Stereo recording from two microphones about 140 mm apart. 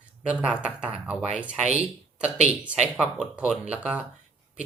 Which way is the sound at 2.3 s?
55° right (ahead or behind).